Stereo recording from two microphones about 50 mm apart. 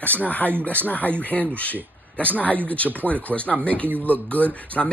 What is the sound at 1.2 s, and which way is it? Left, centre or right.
Speech, left.